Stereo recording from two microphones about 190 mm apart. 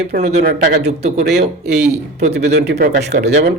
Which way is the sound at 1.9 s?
35° right (ahead or behind).